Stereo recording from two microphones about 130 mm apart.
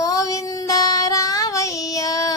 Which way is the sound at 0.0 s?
25° left (ahead or behind).